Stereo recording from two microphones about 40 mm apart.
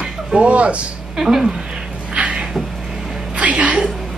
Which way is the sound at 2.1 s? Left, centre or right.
Right.